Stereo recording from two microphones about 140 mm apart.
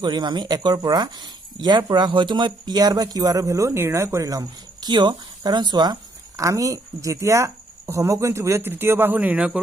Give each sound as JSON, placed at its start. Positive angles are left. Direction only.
{"t": 0.0, "sound": "speech", "side_deg": -30}